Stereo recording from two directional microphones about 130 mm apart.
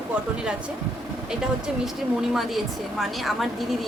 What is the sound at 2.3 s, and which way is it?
A woman's voice, centre (ahead or behind).